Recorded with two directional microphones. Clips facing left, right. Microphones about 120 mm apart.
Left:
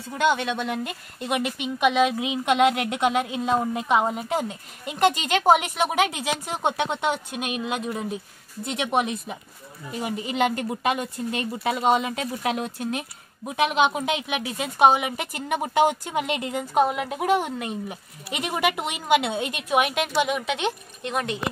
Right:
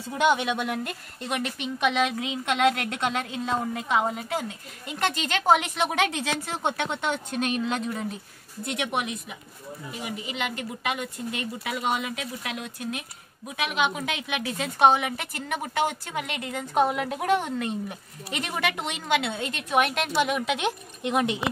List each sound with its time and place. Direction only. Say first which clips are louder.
0.2 s speech: even; 15° right (ahead or behind)
0.8 s a woman's voice: left 3 dB; 5° left (ahead or behind)
8.6 s a woman's voice: left 5 dB; 25° left (ahead or behind)
16.7 s a woman's voice: left 1 dB; 5° left (ahead or behind); by 21.5 s 15° right (ahead or behind)